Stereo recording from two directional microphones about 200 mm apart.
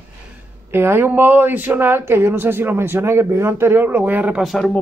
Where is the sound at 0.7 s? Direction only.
10° right (ahead or behind).